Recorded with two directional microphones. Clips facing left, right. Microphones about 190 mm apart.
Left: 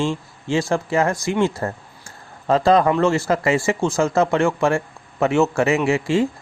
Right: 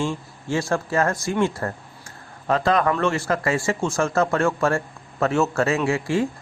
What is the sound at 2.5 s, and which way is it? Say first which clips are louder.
A man's voice: left 4 dB; 25° left (ahead or behind).